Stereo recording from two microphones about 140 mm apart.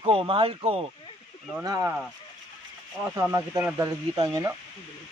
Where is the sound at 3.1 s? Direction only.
25° right (ahead or behind).